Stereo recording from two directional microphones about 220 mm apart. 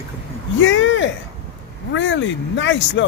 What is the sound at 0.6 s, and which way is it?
Speech, 55° left (ahead or behind).